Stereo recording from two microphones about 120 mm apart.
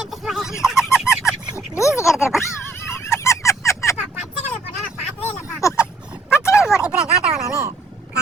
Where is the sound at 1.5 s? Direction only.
25° left (ahead or behind).